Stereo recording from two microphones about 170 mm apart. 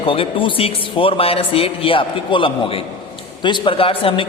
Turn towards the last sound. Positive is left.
turn(degrees=30)  # may be behind; listen again after turning